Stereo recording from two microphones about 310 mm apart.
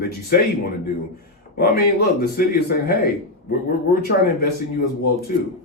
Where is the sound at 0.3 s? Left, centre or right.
Left.